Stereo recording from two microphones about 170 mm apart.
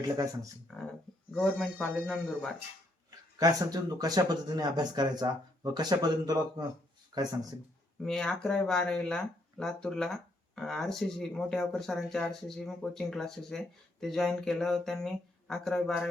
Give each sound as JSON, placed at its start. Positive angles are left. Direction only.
{"t": 0.7, "sound": "speech", "side_deg": 5}
{"t": 3.3, "sound": "speech", "side_deg": -20}
{"t": 8.0, "sound": "speech", "side_deg": 5}